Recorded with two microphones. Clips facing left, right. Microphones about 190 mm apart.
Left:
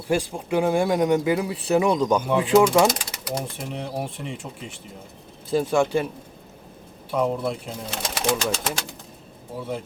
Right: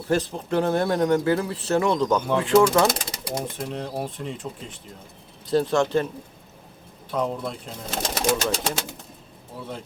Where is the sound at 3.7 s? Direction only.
10° left (ahead or behind).